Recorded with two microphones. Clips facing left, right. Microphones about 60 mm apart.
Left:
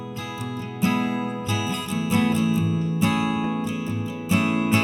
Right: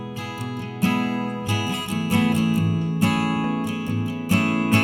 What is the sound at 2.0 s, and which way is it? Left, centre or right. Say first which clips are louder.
Music: right 1 dB; right.